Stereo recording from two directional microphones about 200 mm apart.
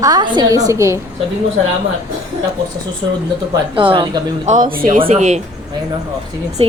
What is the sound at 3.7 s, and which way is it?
Speech, 25° right (ahead or behind).